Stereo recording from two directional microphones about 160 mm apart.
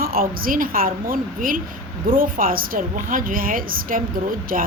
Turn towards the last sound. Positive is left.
turn(degrees=-60)  # may be behind; listen again after turning